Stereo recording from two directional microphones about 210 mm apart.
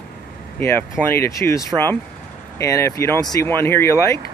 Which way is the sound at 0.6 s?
10° left (ahead or behind).